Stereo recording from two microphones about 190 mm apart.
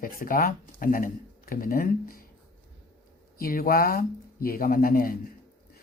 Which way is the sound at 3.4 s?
50° left (ahead or behind).